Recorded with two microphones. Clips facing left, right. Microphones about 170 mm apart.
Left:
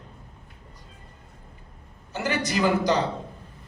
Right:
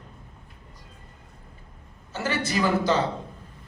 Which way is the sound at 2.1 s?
15° left (ahead or behind).